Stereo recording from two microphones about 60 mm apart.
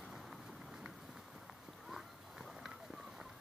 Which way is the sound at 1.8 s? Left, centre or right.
Centre.